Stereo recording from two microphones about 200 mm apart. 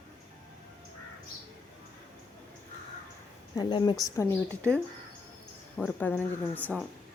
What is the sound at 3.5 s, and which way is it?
A woman's voice, 20° left (ahead or behind).